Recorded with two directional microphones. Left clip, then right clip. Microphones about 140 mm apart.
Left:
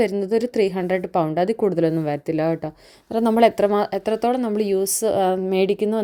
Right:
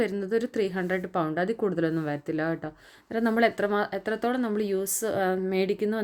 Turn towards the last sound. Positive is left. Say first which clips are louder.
# left 7 dB
turn(degrees=35)  # may be behind; listen again after turning